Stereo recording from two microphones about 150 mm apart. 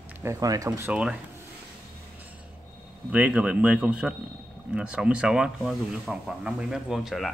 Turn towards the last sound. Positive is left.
turn(degrees=0)  # may be behind; listen again after turning